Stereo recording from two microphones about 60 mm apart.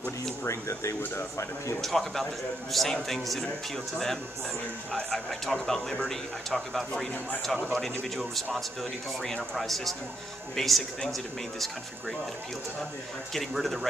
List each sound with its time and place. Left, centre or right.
0.5 s speech: left
1.8 s speech: centre
5.1 s speech: centre
13.3 s speech: centre